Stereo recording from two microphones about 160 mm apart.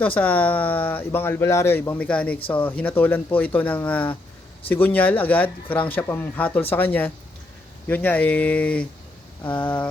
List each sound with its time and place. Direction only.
0.0 s speech: 10° left (ahead or behind)